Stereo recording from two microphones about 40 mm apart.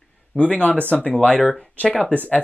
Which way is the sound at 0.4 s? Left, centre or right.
Left.